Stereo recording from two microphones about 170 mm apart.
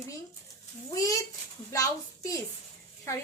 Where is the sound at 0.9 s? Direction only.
20° left (ahead or behind).